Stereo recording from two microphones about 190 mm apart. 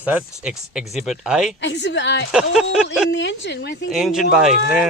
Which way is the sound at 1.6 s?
65° left (ahead or behind).